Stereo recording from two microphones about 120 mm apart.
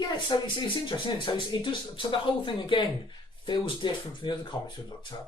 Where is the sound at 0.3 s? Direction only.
40° left (ahead or behind).